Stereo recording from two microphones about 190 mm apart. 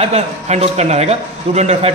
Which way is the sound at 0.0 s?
35° right (ahead or behind).